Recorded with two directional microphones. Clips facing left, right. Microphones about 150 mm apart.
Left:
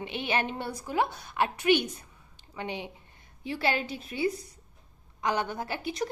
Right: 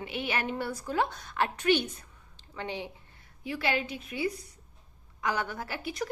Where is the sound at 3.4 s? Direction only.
30° left (ahead or behind).